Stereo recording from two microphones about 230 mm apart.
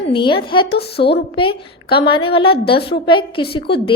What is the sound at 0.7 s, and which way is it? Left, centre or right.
Speech, left.